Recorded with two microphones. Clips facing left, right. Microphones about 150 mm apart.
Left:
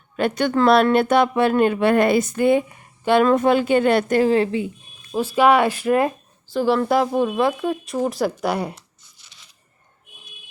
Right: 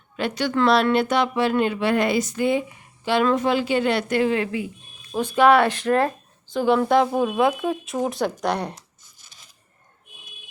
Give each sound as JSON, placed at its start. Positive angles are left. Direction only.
{"t": 0.2, "sound": "speech", "side_deg": 50}
{"t": 5.1, "sound": "speech", "side_deg": 5}
{"t": 6.5, "sound": "speech", "side_deg": 0}
{"t": 8.7, "sound": "tearing", "side_deg": -45}